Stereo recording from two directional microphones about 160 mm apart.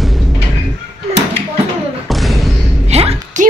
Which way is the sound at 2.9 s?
40° right (ahead or behind).